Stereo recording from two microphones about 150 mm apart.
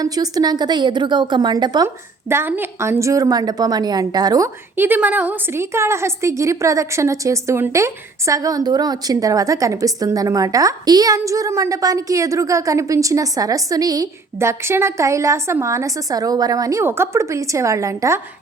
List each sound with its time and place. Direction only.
0.0 s a woman's voice: 25° right (ahead or behind)
2.3 s a woman's voice: 15° right (ahead or behind)
4.8 s a woman's voice: 10° right (ahead or behind)